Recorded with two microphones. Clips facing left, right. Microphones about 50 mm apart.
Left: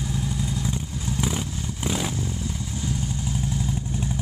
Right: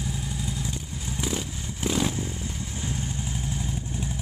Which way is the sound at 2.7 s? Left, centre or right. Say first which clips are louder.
Left 4 dB; right.